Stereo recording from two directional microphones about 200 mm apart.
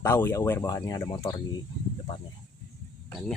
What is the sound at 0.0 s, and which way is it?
Speech, 10° left (ahead or behind).